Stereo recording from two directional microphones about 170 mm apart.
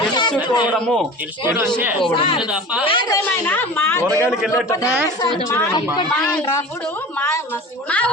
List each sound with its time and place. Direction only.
0.1 s a sound: 25° left (ahead or behind)
0.4 s a woman's voice: 25° left (ahead or behind)
0.7 s speech: 5° left (ahead or behind)
2.0 s a woman's voice: 30° left (ahead or behind)
3.2 s speech: 10° left (ahead or behind)
4.3 s speech: 5° right (ahead or behind)
5.5 s a woman's voice: 20° left (ahead or behind)
7.9 s speech: 5° left (ahead or behind)